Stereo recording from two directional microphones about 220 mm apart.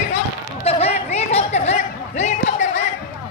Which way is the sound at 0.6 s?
30° left (ahead or behind).